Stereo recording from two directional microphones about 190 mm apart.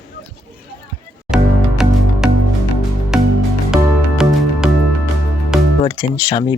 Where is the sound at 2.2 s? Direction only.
5° right (ahead or behind).